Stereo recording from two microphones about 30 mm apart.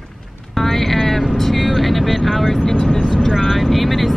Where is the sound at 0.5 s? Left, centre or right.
Centre.